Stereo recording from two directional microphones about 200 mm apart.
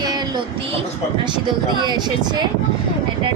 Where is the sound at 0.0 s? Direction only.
20° right (ahead or behind).